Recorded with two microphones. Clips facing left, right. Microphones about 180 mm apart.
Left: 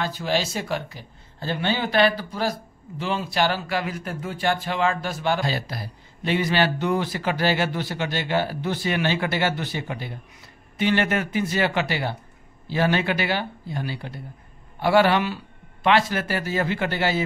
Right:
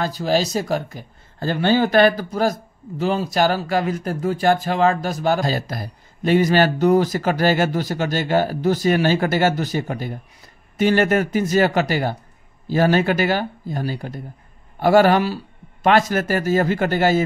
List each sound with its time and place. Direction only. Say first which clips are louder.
0.0 s speech: right 5 dB; 40° right (ahead or behind)